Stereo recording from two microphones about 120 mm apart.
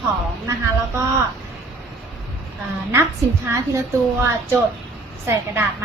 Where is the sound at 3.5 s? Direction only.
25° right (ahead or behind).